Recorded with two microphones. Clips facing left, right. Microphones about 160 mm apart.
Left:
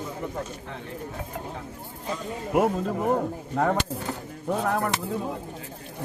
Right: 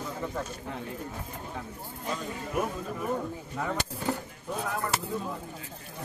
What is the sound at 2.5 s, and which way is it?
Speech, 80° left.